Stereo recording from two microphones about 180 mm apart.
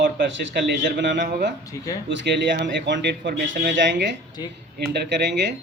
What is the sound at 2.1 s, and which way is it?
Speech, 80° right.